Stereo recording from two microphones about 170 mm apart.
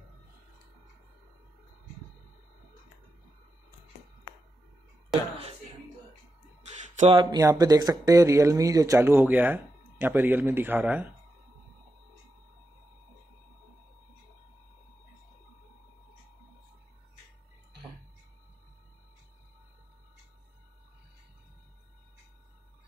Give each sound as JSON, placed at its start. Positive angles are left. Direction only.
{"t": 7.0, "sound": "speech", "side_deg": -30}